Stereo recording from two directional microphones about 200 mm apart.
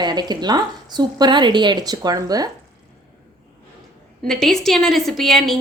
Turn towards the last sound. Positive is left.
turn(degrees=0)  # may be behind; listen again after turning